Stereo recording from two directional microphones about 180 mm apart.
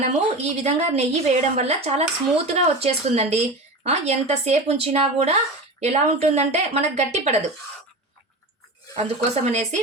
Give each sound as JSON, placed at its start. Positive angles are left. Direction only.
{"t": 0.0, "sound": "a woman's voice", "side_deg": -35}
{"t": 9.0, "sound": "a woman's voice", "side_deg": -35}